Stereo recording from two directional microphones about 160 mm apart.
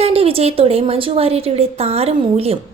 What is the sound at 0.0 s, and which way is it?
A woman's voice, 40° right (ahead or behind).